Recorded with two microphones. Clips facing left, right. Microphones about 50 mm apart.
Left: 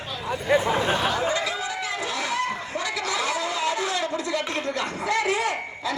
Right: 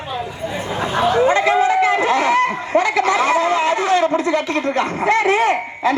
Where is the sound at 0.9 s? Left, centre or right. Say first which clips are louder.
Right 9 dB; right.